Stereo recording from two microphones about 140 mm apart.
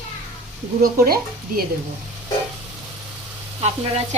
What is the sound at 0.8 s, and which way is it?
Speech, 90° right.